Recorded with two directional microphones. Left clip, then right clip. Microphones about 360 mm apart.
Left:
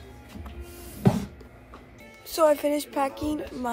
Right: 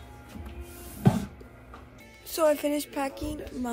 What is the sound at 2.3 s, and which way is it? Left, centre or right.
Speech, centre.